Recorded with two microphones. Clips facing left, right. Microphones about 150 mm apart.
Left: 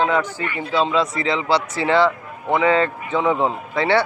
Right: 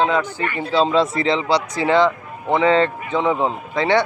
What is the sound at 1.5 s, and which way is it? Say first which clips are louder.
Speech: left 1 dB; 15° right (ahead or behind).